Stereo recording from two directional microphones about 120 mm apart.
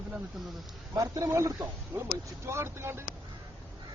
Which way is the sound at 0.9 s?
30° right (ahead or behind).